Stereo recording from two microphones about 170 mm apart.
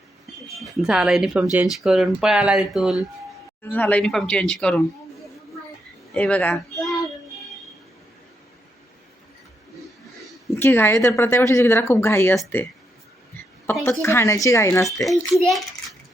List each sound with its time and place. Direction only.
0.6 s speech: centre (ahead or behind)
3.6 s speech: 10° left (ahead or behind)
6.1 s speech: 5° left (ahead or behind)
10.5 s speech: 15° left (ahead or behind)
13.7 s speech: 15° left (ahead or behind)
15.3 s a child's voice: centre (ahead or behind)